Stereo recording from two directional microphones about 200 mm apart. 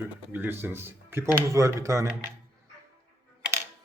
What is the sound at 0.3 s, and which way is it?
Speech, 10° right (ahead or behind).